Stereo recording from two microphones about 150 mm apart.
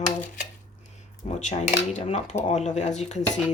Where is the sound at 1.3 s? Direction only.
50° left (ahead or behind).